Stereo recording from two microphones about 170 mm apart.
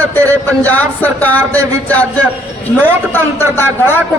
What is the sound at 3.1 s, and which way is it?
Speech, 15° left (ahead or behind).